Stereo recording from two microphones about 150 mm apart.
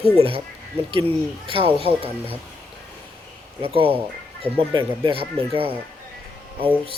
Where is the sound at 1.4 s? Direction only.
35° right (ahead or behind).